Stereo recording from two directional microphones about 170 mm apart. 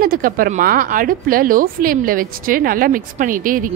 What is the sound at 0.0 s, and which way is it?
A woman's voice, 55° right (ahead or behind).